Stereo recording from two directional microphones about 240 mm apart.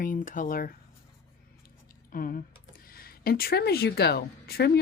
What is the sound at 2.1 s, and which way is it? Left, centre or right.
Speech, left.